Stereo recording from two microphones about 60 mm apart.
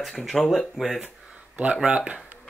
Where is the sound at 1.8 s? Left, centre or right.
Right.